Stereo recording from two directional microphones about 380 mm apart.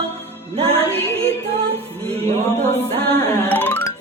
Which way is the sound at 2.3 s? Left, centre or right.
Centre.